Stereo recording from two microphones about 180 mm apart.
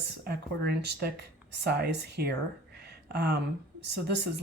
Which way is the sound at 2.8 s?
65° right (ahead or behind).